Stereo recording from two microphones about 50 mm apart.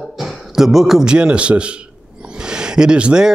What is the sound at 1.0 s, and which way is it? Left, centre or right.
Speech, centre.